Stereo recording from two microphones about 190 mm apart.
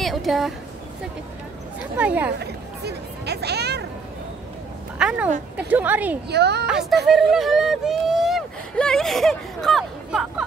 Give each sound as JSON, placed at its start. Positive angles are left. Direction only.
{"t": 0.0, "sound": "speech", "side_deg": 0}
{"t": 2.0, "sound": "a woman's voice", "side_deg": -10}
{"t": 2.3, "sound": "hubbub", "side_deg": -60}
{"t": 4.9, "sound": "a woman's voice", "side_deg": -5}
{"t": 6.2, "sound": "a woman's voice", "side_deg": -60}
{"t": 6.7, "sound": "a woman's voice", "side_deg": 0}